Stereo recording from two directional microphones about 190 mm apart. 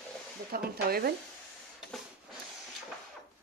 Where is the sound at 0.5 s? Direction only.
50° right (ahead or behind).